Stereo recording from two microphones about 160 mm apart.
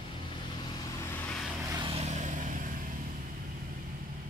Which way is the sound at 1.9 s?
45° right (ahead or behind).